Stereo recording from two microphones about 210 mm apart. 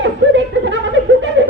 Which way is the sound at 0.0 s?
60° right (ahead or behind).